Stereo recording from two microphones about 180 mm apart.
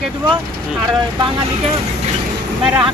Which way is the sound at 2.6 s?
5° right (ahead or behind).